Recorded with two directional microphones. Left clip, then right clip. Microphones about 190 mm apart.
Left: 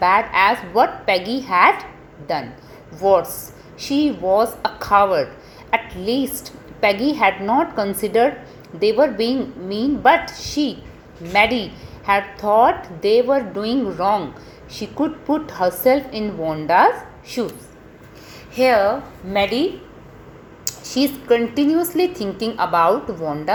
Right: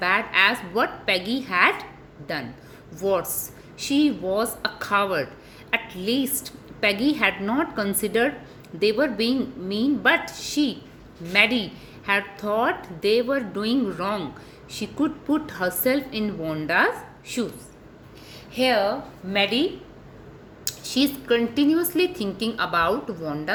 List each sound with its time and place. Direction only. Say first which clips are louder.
0.0 s a woman's voice: left 5 dB; 15° right (ahead or behind)
18.5 s a woman's voice: left 6 dB; 10° right (ahead or behind)
20.7 s a woman's voice: left 3 dB; 15° right (ahead or behind)